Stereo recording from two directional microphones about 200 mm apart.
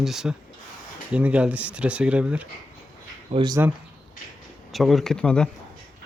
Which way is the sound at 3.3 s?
20° right (ahead or behind).